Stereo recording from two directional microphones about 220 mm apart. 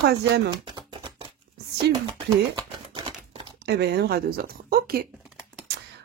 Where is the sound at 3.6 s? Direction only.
50° right (ahead or behind).